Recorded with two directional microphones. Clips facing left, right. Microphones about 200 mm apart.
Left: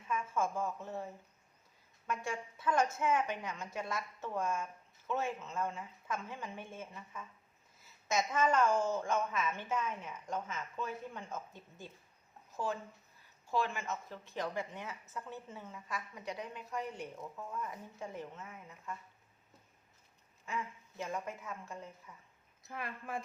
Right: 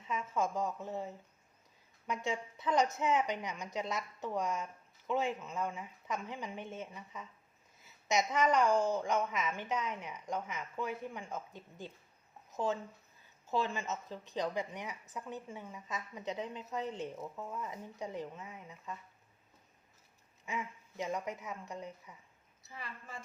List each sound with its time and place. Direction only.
0.1 s a woman's voice: 20° right (ahead or behind)
20.4 s a woman's voice: 15° right (ahead or behind)
22.6 s a woman's voice: 55° left (ahead or behind)